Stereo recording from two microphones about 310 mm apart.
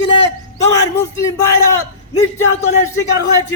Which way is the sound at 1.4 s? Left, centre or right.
Centre.